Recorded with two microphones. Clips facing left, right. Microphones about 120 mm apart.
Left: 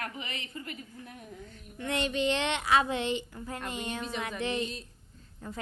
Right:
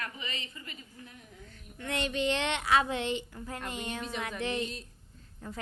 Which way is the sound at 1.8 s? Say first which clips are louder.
Left 2 dB; 20° left (ahead or behind).